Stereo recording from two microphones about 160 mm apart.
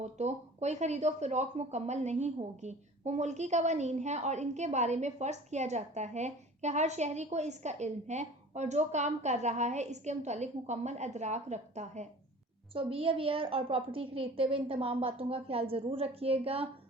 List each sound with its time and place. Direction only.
0.0 s speech: 45° right (ahead or behind)
12.7 s a woman's voice: 35° right (ahead or behind)